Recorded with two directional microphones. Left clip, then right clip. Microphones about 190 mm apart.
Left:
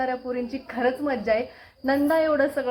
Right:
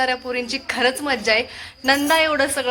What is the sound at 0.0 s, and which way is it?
A woman's voice, 30° right (ahead or behind).